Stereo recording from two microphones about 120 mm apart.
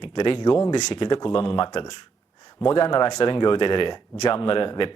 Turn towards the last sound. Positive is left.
turn(degrees=45)  # may be behind; listen again after turning